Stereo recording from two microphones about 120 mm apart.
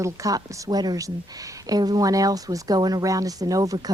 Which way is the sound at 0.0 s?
30° right (ahead or behind).